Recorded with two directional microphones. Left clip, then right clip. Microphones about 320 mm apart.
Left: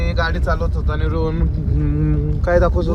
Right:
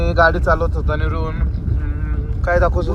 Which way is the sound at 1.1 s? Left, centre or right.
Centre.